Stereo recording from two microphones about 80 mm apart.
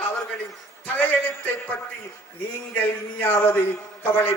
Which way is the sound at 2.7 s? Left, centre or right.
Left.